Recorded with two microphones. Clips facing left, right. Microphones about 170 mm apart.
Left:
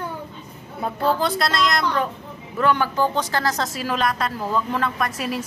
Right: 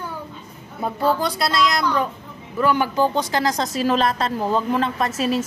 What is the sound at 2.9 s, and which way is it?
Speech, 15° right (ahead or behind).